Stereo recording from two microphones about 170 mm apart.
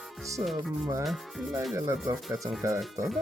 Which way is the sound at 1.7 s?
20° right (ahead or behind).